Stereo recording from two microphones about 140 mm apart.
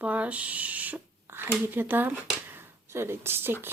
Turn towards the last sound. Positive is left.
turn(degrees=-15)  # may be behind; listen again after turning